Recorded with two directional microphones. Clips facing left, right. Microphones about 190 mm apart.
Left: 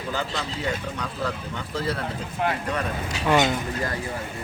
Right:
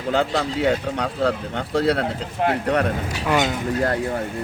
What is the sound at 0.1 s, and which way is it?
Speech, 65° right (ahead or behind).